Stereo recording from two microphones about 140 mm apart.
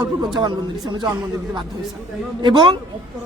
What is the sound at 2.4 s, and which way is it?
Speech, 35° right (ahead or behind).